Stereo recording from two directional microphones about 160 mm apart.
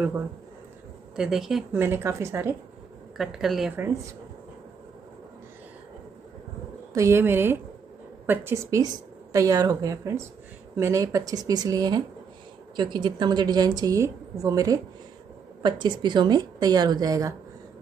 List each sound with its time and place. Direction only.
1.1 s speech: 5° right (ahead or behind)
1.8 s speech: 15° right (ahead or behind)
3.2 s speech: centre (ahead or behind)
3.7 s speech: 15° right (ahead or behind)
6.9 s a woman's voice: 20° right (ahead or behind)